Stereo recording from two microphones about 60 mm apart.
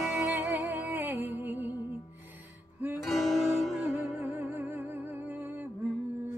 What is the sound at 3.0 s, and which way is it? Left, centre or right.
Music, centre.